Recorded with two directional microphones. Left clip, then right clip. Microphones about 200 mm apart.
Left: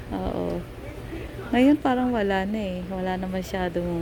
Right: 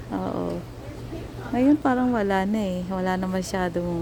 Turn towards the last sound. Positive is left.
turn(degrees=-15)  # may be behind; listen again after turning